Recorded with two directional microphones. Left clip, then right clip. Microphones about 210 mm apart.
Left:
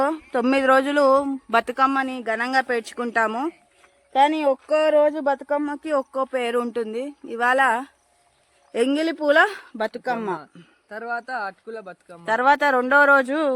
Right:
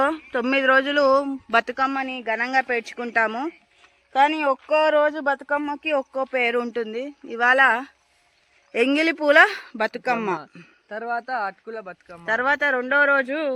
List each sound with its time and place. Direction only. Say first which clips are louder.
0.0 s speech: even; 10° left (ahead or behind)
9.7 s speech: right 2 dB; 15° right (ahead or behind)
10.8 s speech: right 2 dB; 30° right (ahead or behind)
12.2 s speech: left 3 dB; 15° left (ahead or behind)